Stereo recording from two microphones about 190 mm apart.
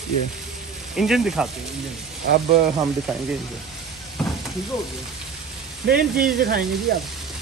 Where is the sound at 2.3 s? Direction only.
55° right (ahead or behind).